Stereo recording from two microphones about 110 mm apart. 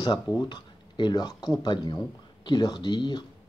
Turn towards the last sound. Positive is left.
turn(degrees=45)  # may be behind; listen again after turning